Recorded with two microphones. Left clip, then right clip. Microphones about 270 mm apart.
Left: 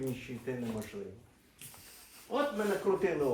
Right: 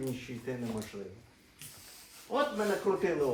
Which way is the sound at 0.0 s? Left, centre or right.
Centre.